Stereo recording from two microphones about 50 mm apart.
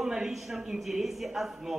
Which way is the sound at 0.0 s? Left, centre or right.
Centre.